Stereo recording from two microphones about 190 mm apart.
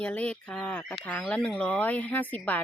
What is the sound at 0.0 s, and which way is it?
Speech, 5° left (ahead or behind).